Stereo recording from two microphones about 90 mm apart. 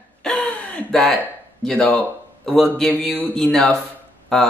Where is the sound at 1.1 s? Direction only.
5° left (ahead or behind).